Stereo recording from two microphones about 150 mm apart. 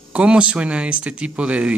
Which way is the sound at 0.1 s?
10° right (ahead or behind).